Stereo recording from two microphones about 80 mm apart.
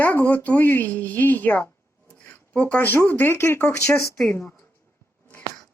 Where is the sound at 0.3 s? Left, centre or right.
Left.